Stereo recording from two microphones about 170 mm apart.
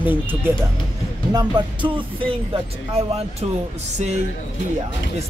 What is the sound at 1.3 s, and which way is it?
Music, 25° right (ahead or behind).